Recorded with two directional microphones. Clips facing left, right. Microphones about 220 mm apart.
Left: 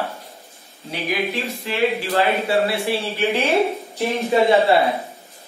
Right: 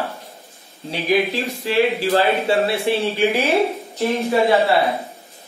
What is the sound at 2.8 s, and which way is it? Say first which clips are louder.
Speech: right 3 dB; 15° right (ahead or behind).